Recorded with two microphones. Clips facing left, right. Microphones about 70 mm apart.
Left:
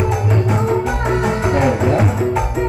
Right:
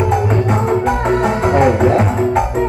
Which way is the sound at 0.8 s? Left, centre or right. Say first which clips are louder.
Right 3 dB; right.